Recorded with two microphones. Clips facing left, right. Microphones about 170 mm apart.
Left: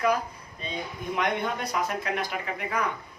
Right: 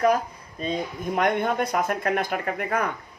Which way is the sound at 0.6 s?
45° right (ahead or behind).